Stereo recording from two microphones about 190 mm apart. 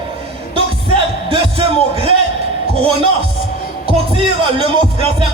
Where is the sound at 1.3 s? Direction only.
30° right (ahead or behind).